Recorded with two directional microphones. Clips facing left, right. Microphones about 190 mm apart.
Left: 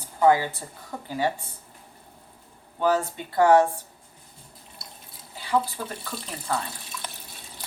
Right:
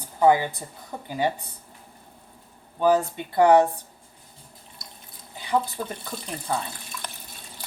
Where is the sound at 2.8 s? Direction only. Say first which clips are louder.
Right 3 dB; 15° right (ahead or behind).